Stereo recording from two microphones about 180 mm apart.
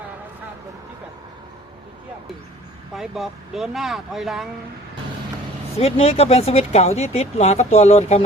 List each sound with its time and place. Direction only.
2.9 s speech: centre (ahead or behind)
5.7 s speech: 35° left (ahead or behind)